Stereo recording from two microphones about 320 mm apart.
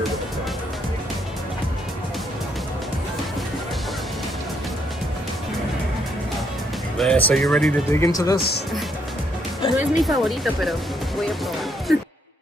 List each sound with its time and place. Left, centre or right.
7.0 s speech: centre
8.4 s speech: left
9.6 s music: centre
9.9 s speech: centre